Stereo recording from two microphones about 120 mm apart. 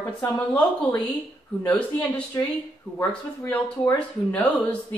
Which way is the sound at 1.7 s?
10° left (ahead or behind).